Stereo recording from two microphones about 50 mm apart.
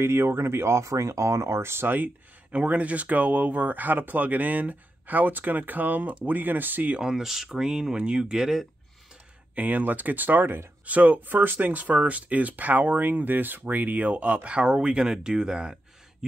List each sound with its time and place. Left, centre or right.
0.0 s speech: right
2.5 s speech: right
7.0 s speech: centre
9.6 s speech: right; by 16.3 s centre